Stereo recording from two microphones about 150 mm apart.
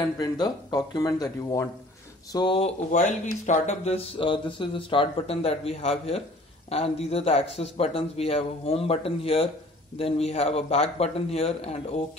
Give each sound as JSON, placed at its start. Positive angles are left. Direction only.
{"t": 0.0, "sound": "speech", "side_deg": 30}
{"t": 2.3, "sound": "speech", "side_deg": 35}
{"t": 2.9, "sound": "speech", "side_deg": 55}